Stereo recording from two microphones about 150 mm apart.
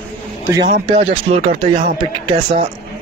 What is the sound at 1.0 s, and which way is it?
Speech, 45° right (ahead or behind).